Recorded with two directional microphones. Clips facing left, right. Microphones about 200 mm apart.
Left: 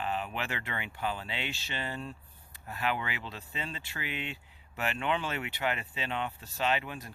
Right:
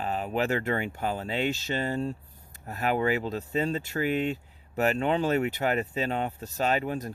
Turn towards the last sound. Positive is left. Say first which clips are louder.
# right 5 dB
turn(degrees=-40)  # may be behind; listen again after turning